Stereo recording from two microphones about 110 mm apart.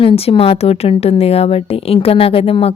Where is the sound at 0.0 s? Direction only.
55° left (ahead or behind).